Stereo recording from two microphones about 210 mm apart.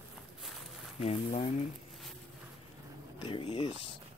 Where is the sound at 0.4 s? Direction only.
Centre (ahead or behind).